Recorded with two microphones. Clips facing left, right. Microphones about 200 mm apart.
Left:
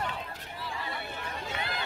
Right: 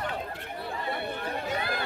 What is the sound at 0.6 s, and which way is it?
Chatter, 55° right (ahead or behind).